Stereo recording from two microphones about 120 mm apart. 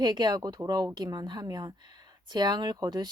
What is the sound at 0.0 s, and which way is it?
Speech, 40° right (ahead or behind).